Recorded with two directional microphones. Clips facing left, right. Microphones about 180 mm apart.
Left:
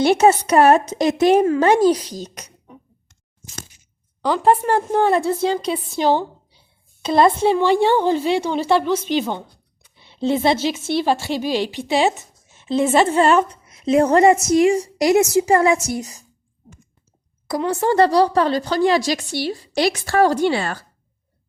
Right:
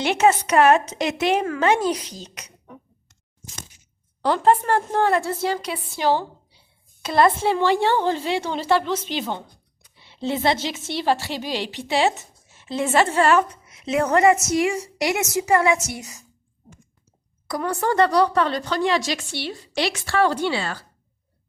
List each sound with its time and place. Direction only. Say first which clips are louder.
0.0 s speech: left 4 dB; 35° left (ahead or behind)
4.4 s a woman's voice: left 3 dB; 15° left (ahead or behind); by 16.2 s 35° left (ahead or behind)
17.5 s speech: left 4 dB; 25° left (ahead or behind); by 20.8 s 50° left (ahead or behind)